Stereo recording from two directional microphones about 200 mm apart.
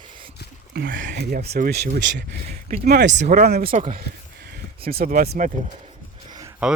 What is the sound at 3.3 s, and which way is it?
Speech, 50° right (ahead or behind).